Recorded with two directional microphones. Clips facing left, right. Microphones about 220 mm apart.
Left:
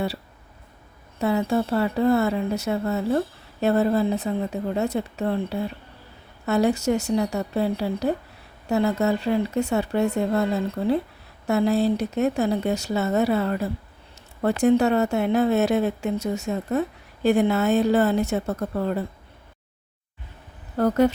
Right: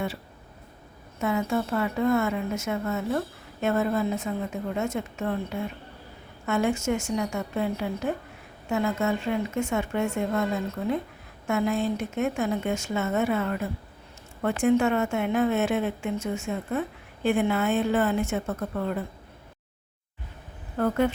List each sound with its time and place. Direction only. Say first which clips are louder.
1.2 s speech: left 4 dB; 35° left (ahead or behind)
20.7 s speech: left 5 dB; 40° left (ahead or behind)